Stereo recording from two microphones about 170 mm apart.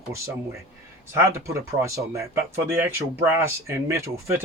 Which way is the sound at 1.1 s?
15° right (ahead or behind).